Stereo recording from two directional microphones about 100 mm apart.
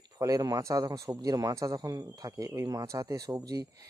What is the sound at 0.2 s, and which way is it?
A man's voice, 35° right (ahead or behind).